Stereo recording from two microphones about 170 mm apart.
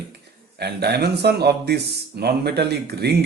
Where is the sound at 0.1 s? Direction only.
70° right (ahead or behind).